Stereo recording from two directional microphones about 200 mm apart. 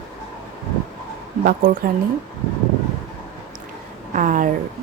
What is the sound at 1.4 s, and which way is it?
Speech, 45° right (ahead or behind).